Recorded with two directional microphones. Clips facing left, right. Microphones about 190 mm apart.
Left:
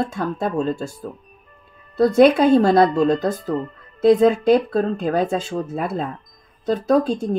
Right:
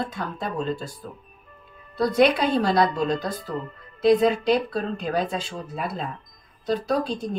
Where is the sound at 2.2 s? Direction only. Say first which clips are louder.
Left 7 dB; 45° left (ahead or behind).